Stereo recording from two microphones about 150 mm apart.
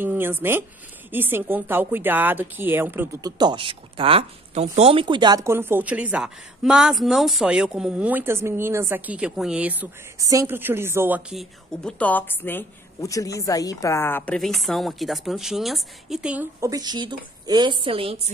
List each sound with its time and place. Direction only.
0.0 s speech: 15° right (ahead or behind)
3.2 s speech: 25° right (ahead or behind); by 9.8 s 10° right (ahead or behind)
10.1 s speech: 20° right (ahead or behind)
11.3 s a woman's voice: 5° left (ahead or behind)
16.6 s a woman's voice: 25° right (ahead or behind)